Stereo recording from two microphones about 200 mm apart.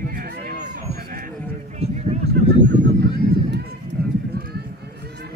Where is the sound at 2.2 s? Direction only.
55° right (ahead or behind).